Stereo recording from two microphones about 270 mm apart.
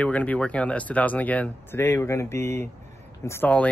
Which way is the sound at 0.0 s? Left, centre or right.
Centre.